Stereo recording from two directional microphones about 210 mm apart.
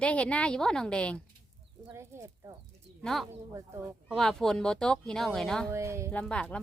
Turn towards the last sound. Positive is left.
turn(degrees=5)  # may be behind; listen again after turning